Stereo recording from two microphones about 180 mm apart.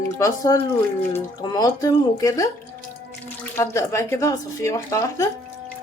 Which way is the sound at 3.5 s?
15° left (ahead or behind).